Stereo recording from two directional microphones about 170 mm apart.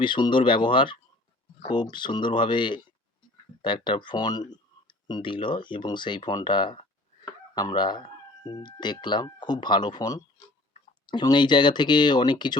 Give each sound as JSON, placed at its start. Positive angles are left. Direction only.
{"t": 0.0, "sound": "speech", "side_deg": 30}